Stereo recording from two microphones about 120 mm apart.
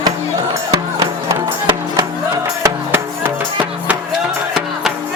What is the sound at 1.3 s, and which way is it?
Music, 25° right (ahead or behind).